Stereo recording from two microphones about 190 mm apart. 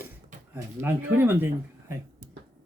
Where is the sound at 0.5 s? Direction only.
10° right (ahead or behind).